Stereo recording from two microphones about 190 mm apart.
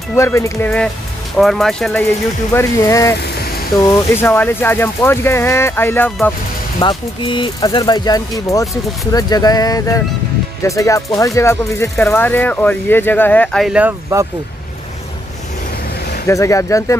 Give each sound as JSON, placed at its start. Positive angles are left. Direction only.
{"t": 0.1, "sound": "speech", "side_deg": 15}
{"t": 2.5, "sound": "speech", "side_deg": 15}
{"t": 6.8, "sound": "speech", "side_deg": 25}
{"t": 16.3, "sound": "speech", "side_deg": 15}